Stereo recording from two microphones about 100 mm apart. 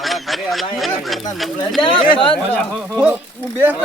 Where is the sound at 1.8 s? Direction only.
55° left (ahead or behind).